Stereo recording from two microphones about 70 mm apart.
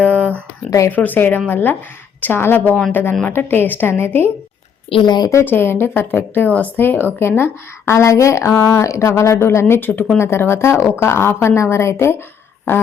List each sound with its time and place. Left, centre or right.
0.2 s a sound: right
0.9 s speech: left
5.0 s speech: left
5.5 s speech: left